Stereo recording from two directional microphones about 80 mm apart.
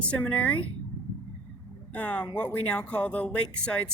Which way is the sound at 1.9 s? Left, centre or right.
Centre.